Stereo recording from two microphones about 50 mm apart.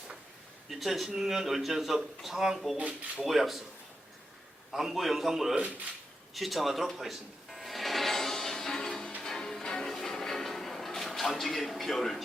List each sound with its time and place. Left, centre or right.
0.7 s speech: centre
2.7 s speech: right
3.2 s speech: centre
4.7 s speech: centre
6.9 s music: centre